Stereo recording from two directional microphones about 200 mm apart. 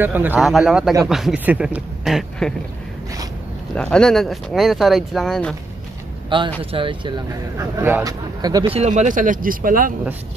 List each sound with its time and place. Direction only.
0.0 s speech: 10° right (ahead or behind)
3.7 s speech: 5° left (ahead or behind)
6.6 s speech: 25° right (ahead or behind); by 9.9 s 45° right (ahead or behind)